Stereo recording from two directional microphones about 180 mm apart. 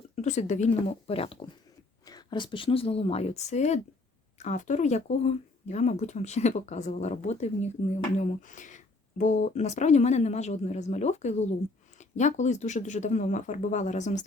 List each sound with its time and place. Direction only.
0.2 s speech: 40° left (ahead or behind)